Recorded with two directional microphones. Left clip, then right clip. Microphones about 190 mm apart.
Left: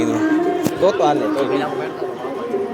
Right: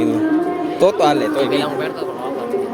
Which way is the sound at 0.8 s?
60° right (ahead or behind).